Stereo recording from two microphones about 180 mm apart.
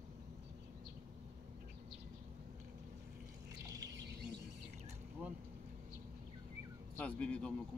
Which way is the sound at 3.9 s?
70° right (ahead or behind).